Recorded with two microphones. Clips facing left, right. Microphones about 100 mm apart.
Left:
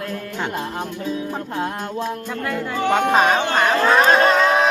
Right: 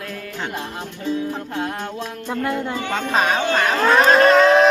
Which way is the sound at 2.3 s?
25° right (ahead or behind).